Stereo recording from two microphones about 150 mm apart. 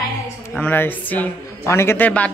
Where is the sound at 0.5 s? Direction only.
10° left (ahead or behind).